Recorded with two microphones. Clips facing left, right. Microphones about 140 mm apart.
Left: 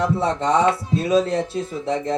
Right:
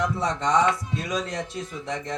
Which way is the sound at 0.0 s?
30° left (ahead or behind).